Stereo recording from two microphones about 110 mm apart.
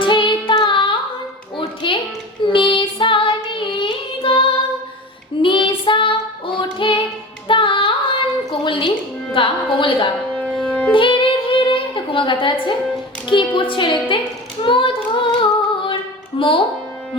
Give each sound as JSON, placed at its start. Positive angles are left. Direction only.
{"t": 0.0, "sound": "singing", "side_deg": 50}
{"t": 0.5, "sound": "child singing", "side_deg": 45}
{"t": 1.5, "sound": "music", "side_deg": 50}
{"t": 2.5, "sound": "child singing", "side_deg": 50}
{"t": 7.4, "sound": "singing", "side_deg": 50}
{"t": 8.6, "sound": "music", "side_deg": 50}
{"t": 9.3, "sound": "carnatic music", "side_deg": 50}
{"t": 10.3, "sound": "music", "side_deg": 10}
{"t": 10.9, "sound": "a sound", "side_deg": 50}
{"t": 13.2, "sound": "a woman's voice", "side_deg": 50}
{"t": 14.6, "sound": "singing", "side_deg": 50}
{"t": 16.4, "sound": "speech", "side_deg": 50}